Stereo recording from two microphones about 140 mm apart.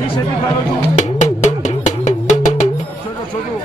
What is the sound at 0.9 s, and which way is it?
Music, 60° left (ahead or behind).